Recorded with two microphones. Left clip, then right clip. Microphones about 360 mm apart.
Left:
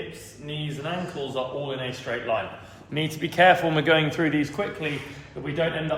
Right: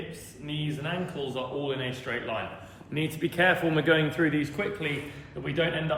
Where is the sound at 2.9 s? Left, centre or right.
Centre.